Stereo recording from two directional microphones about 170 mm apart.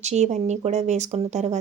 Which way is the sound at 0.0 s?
40° right (ahead or behind).